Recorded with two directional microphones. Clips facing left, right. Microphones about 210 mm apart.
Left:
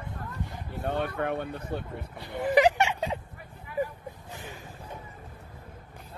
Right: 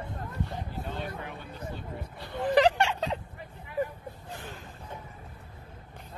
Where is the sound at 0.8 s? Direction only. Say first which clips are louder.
Left 8 dB; 65° left (ahead or behind).